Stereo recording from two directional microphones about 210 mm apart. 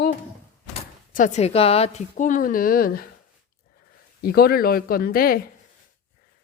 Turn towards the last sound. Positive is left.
turn(degrees=45)  # may be behind; listen again after turning